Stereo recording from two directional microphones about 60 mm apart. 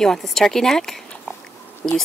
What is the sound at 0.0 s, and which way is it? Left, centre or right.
Speech, centre.